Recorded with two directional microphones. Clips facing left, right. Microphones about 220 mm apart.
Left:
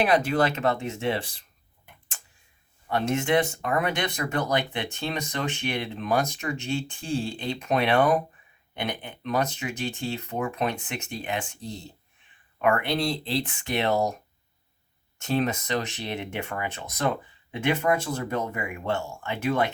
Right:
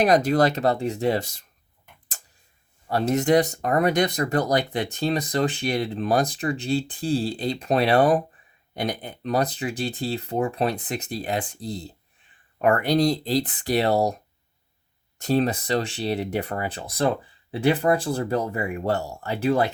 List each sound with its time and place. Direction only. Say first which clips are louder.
0.0 s speech: right 4 dB; 40° right (ahead or behind)
2.8 s speech: right 4 dB; 35° right (ahead or behind)
15.2 s speech: right 4 dB; 35° right (ahead or behind)